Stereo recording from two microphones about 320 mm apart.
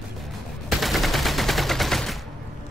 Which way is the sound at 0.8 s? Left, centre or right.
Centre.